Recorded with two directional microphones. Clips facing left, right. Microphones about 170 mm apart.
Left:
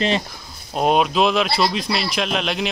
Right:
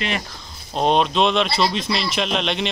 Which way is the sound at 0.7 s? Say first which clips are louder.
Left 1 dB; 5° left (ahead or behind).